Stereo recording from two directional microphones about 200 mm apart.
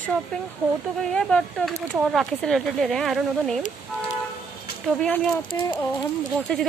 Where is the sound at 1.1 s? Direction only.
5° left (ahead or behind).